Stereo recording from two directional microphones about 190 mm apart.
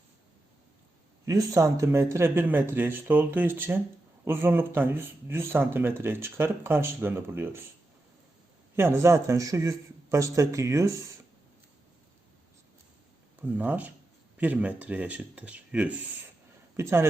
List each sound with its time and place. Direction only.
1.2 s speech: 15° right (ahead or behind)
8.7 s speech: 15° right (ahead or behind)
13.4 s speech: 10° right (ahead or behind)